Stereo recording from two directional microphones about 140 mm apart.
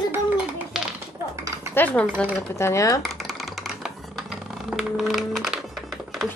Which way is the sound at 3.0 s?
Centre (ahead or behind).